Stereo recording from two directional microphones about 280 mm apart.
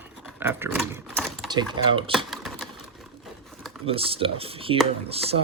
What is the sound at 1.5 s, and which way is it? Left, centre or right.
Speech, centre.